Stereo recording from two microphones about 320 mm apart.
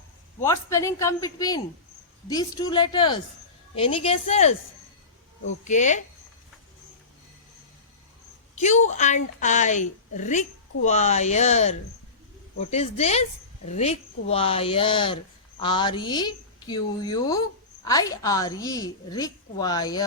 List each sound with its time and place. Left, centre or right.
0.4 s a woman's voice: centre
5.6 s a woman's voice: left
8.5 s a woman's voice: left